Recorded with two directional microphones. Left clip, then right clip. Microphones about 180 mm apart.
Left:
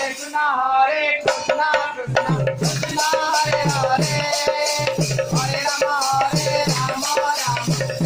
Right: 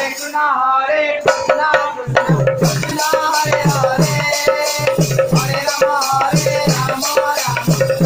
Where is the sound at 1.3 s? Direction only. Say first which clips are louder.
Right 8 dB; 20° left (ahead or behind).